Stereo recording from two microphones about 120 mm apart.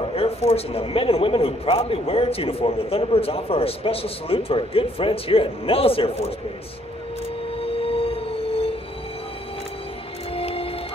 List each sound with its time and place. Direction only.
0.1 s a man's voice: 55° left (ahead or behind)
7.6 s train: 50° left (ahead or behind)
10.3 s music: 50° left (ahead or behind)